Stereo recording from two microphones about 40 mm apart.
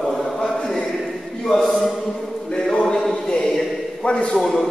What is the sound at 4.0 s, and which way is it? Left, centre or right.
Speech, left.